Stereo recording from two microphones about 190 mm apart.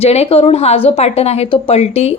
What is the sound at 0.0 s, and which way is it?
A woman's voice, 30° left (ahead or behind).